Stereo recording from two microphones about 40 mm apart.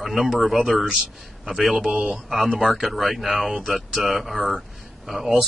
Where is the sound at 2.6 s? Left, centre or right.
Centre.